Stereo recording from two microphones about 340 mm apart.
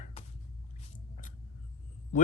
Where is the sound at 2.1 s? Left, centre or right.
Left.